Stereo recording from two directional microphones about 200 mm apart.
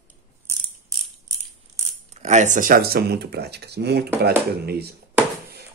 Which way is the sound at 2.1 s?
35° right (ahead or behind).